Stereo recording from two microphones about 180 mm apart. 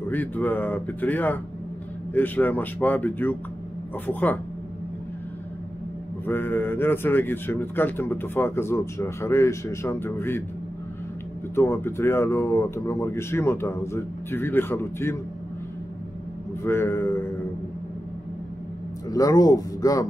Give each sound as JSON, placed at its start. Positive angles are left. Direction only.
{"t": 0.1, "sound": "speech", "side_deg": 10}
{"t": 6.2, "sound": "speech", "side_deg": 10}
{"t": 11.5, "sound": "speech", "side_deg": 15}
{"t": 16.6, "sound": "speech", "side_deg": 15}
{"t": 19.0, "sound": "speech", "side_deg": 20}